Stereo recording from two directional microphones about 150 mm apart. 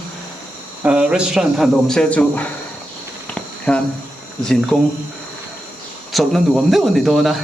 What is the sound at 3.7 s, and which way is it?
Speech, 5° left (ahead or behind).